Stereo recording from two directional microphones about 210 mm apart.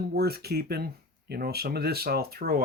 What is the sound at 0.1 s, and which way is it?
Speech, 50° right (ahead or behind).